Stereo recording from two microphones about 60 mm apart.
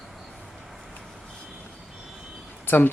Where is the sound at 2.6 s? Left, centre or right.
Left.